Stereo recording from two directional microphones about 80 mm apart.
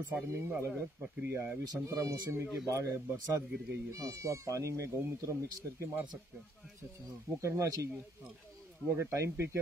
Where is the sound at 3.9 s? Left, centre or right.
Right.